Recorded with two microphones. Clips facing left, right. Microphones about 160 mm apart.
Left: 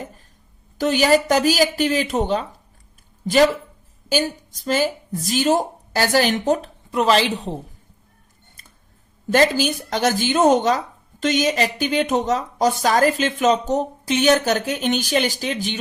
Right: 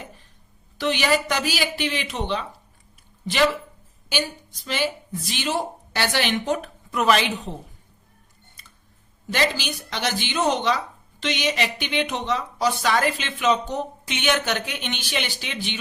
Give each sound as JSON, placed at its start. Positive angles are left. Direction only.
{"t": 0.8, "sound": "speech", "side_deg": 45}
{"t": 9.3, "sound": "speech", "side_deg": 45}